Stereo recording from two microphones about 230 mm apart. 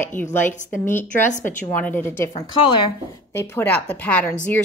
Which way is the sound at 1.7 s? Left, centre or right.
Centre.